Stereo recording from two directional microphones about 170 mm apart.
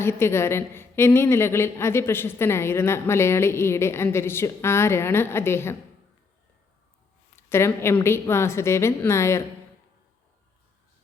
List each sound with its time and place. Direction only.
0.0 s a woman's voice: 15° left (ahead or behind)
7.3 s a woman's voice: 15° left (ahead or behind)